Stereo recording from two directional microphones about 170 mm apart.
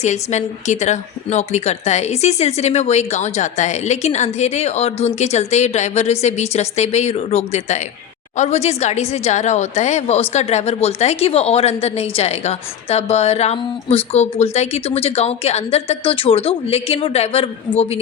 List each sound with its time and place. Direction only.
0.0 s a woman's voice: 45° left (ahead or behind)